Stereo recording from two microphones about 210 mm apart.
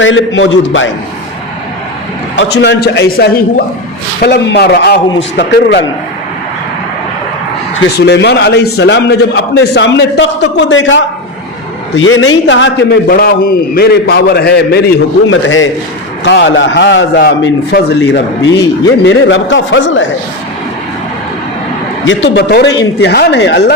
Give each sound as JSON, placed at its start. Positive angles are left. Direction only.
{"t": 0.0, "sound": "a man's voice", "side_deg": 65}
{"t": 2.3, "sound": "a man's voice", "side_deg": 60}
{"t": 8.0, "sound": "a man's voice", "side_deg": 55}
{"t": 12.5, "sound": "a man's voice", "side_deg": 60}
{"t": 15.3, "sound": "a man's voice", "side_deg": 70}
{"t": 16.2, "sound": "a man's voice", "side_deg": 55}
{"t": 22.0, "sound": "a man's voice", "side_deg": 60}